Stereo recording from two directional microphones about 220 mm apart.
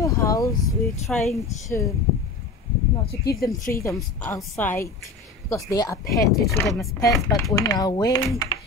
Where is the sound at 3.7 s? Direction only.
15° left (ahead or behind).